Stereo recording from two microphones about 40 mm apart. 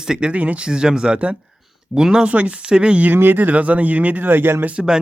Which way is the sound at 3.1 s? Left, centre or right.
Right.